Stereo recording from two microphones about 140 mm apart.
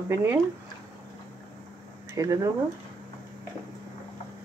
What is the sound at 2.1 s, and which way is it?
Speech, 20° right (ahead or behind).